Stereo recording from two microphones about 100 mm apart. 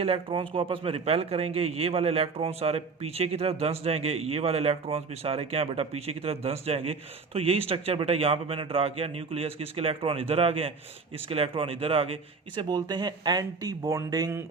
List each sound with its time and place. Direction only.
0.0 s speech: 65° right (ahead or behind); by 6.9 s 85° right
7.3 s a man's voice: 70° right (ahead or behind)
12.6 s speech: 45° right (ahead or behind)